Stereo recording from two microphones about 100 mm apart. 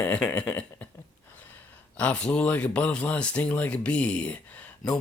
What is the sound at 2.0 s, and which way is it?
Speech, 10° left (ahead or behind).